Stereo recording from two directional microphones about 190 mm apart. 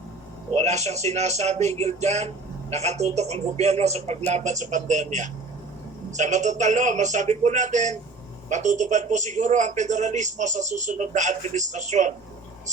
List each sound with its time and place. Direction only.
0.5 s speech: 35° right (ahead or behind)